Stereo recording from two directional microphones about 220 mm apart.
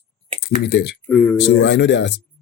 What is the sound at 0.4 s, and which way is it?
Speech, 45° left (ahead or behind).